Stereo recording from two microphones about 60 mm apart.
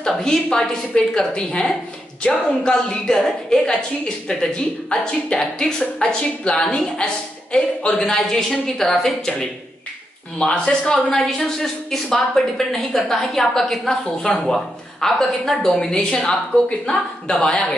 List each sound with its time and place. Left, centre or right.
0.0 s a woman's voice: centre
10.4 s a woman's voice: centre